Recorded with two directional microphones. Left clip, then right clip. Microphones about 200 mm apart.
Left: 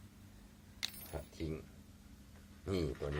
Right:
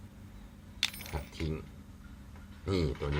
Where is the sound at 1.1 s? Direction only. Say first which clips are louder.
Right 4 dB; 5° left (ahead or behind).